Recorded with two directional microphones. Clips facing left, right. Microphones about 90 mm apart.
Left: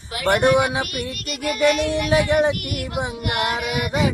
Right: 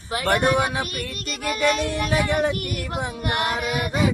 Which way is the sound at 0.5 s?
15° left (ahead or behind).